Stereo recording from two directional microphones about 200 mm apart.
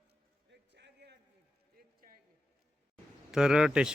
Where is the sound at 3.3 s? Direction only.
5° right (ahead or behind).